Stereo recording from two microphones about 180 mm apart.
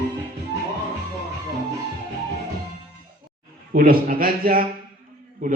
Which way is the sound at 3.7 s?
55° right (ahead or behind).